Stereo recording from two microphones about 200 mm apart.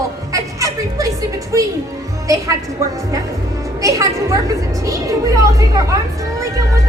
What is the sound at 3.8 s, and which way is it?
A woman's voice, 15° right (ahead or behind).